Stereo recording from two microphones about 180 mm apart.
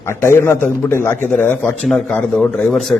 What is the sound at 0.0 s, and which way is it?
A man's voice, 15° left (ahead or behind).